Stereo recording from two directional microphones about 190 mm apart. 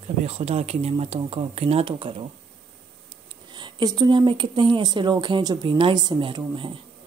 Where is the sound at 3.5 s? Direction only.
20° right (ahead or behind).